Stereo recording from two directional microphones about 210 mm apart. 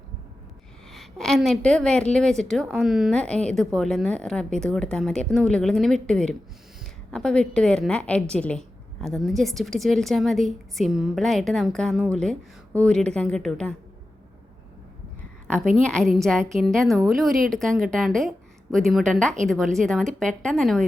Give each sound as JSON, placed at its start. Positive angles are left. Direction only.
{"t": 0.9, "sound": "a woman's voice", "side_deg": 0}
{"t": 15.7, "sound": "a woman's voice", "side_deg": 5}